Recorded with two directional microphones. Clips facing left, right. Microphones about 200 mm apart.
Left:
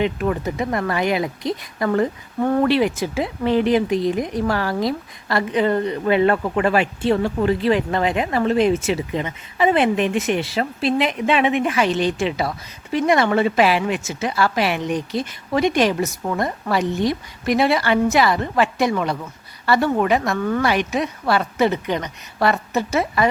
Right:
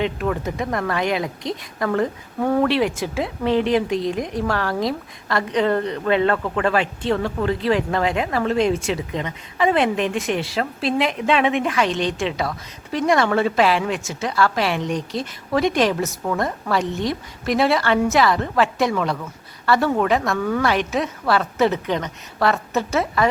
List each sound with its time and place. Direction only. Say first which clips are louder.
0.0 s speech: left 2 dB; 5° left (ahead or behind)
7.2 s speech: left 3 dB; 25° left (ahead or behind)
7.4 s speech: left 1 dB; centre (ahead or behind)